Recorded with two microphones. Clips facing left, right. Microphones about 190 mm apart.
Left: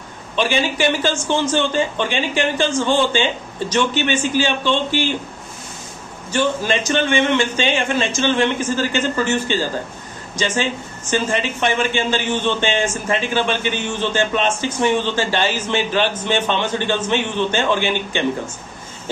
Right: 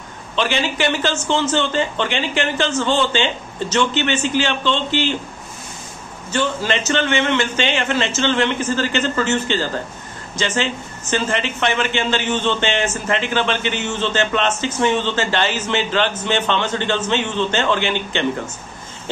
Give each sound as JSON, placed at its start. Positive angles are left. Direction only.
{"t": 0.4, "sound": "speech", "side_deg": 10}
{"t": 6.3, "sound": "speech", "side_deg": 10}